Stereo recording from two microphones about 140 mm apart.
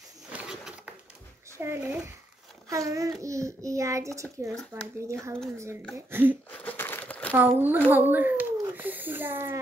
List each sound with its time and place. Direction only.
0.3 s pigeon: 5° right (ahead or behind)
1.6 s a child's voice: 15° right (ahead or behind)
5.9 s a woman's voice: 15° right (ahead or behind)
6.5 s crumpling: 10° left (ahead or behind)
7.3 s a woman's voice: 15° right (ahead or behind)